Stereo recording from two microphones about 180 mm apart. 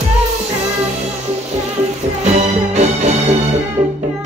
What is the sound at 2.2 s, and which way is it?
Music, 40° right (ahead or behind).